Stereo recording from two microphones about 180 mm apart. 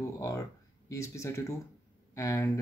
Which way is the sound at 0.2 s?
15° left (ahead or behind).